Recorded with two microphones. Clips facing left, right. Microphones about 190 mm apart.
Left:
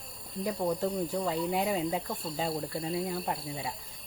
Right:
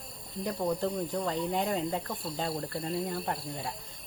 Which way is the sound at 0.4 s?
5° left (ahead or behind).